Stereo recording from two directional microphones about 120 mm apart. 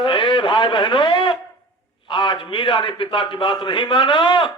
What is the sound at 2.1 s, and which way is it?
A man's voice, 45° left (ahead or behind).